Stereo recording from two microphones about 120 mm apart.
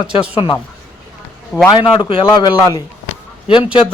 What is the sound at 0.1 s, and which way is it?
Speech, 55° left (ahead or behind).